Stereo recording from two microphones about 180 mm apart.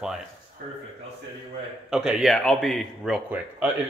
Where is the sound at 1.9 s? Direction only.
5° right (ahead or behind).